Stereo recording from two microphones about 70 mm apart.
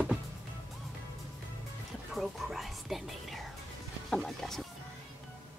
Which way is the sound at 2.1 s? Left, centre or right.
Centre.